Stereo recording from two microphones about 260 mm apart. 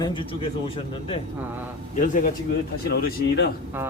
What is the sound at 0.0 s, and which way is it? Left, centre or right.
Speech, centre.